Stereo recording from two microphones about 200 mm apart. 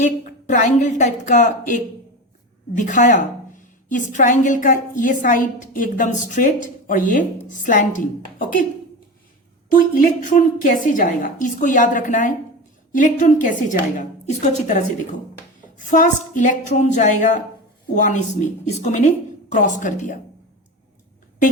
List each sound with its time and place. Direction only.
0.0 s a woman's voice: 40° left (ahead or behind)
9.7 s a woman's voice: 40° left (ahead or behind)
15.9 s a woman's voice: 40° left (ahead or behind)